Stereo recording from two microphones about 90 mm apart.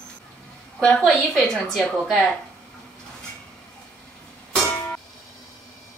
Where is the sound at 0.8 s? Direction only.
10° left (ahead or behind).